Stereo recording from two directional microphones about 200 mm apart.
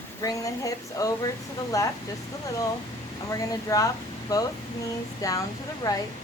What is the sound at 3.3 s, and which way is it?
Speech, 15° left (ahead or behind).